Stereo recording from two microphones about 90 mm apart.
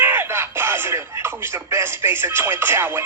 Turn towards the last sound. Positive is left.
turn(degrees=-30)  # may be behind; listen again after turning